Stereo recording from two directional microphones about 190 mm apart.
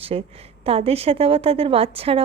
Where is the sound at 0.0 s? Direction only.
30° right (ahead or behind).